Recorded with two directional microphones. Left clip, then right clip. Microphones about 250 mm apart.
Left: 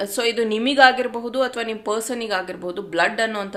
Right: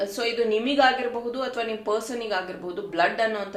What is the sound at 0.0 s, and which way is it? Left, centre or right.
Speech, left.